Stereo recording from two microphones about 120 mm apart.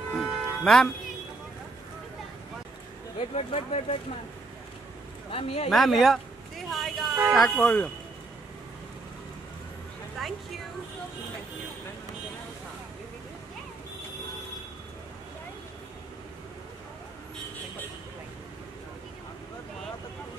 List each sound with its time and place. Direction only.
0.1 s music: 5° left (ahead or behind)
3.2 s speech: 60° left (ahead or behind)
5.3 s speech: 55° left (ahead or behind)
5.7 s speech: centre (ahead or behind)
7.5 s speech: 10° left (ahead or behind)
10.2 s a sound: centre (ahead or behind)